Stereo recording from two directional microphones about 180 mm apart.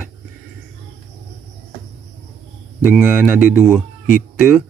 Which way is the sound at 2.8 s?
10° right (ahead or behind).